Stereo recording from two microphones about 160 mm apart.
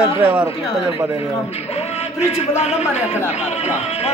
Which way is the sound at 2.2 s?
40° left (ahead or behind).